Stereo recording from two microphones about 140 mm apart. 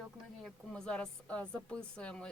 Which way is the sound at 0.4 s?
5° left (ahead or behind).